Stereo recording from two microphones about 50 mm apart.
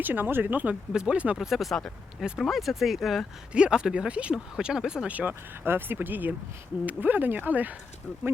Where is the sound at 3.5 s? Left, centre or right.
Centre.